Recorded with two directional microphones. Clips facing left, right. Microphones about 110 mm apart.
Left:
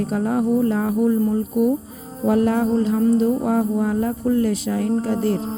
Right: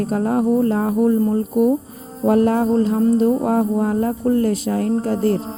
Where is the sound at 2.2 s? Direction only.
45° right (ahead or behind).